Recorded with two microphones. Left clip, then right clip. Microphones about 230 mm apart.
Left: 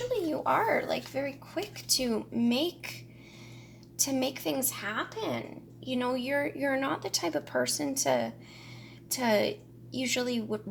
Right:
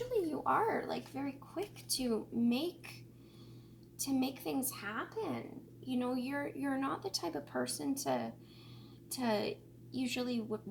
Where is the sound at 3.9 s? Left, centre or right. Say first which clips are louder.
Left 7 dB; left.